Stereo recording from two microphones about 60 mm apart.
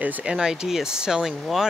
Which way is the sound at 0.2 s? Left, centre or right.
Centre.